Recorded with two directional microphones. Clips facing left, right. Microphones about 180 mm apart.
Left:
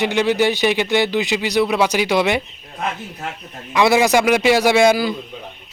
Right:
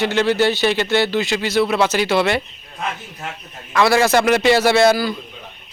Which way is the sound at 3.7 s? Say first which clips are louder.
Even; 15° left (ahead or behind).